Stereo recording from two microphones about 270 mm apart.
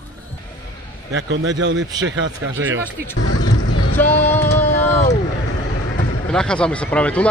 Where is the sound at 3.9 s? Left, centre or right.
Centre.